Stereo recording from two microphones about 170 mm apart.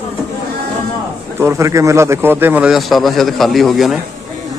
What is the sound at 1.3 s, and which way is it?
A man's voice, 15° right (ahead or behind).